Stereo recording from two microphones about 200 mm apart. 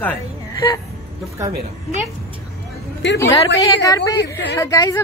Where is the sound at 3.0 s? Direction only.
60° left (ahead or behind).